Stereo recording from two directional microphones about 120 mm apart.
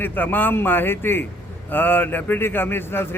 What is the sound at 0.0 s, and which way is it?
A man's voice, 15° left (ahead or behind).